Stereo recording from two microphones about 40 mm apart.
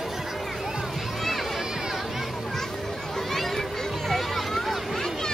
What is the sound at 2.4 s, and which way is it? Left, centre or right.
Children playing, centre.